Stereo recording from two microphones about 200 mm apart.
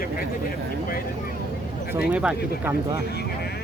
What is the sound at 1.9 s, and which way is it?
Speech, 10° right (ahead or behind).